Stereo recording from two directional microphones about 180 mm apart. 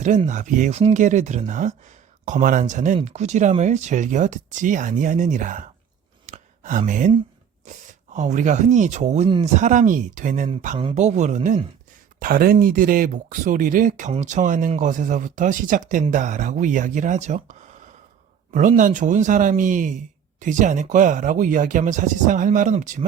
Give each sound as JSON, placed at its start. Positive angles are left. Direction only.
{"t": 0.3, "sound": "speech", "side_deg": -45}
{"t": 6.2, "sound": "a sound", "side_deg": -45}
{"t": 8.1, "sound": "speech", "side_deg": -40}
{"t": 12.2, "sound": "speech", "side_deg": -55}